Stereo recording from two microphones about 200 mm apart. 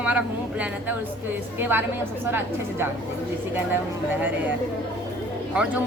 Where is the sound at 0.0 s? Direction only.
5° right (ahead or behind).